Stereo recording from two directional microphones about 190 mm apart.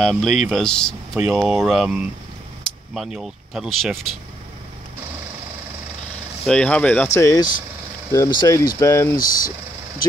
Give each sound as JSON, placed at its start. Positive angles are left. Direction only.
{"t": 0.0, "sound": "speech", "side_deg": 0}
{"t": 6.4, "sound": "speech", "side_deg": 5}
{"t": 7.2, "sound": "speech", "side_deg": 15}
{"t": 9.2, "sound": "speech", "side_deg": 50}